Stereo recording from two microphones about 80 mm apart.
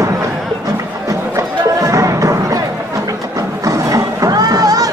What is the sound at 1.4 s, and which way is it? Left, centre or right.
Chatter, right.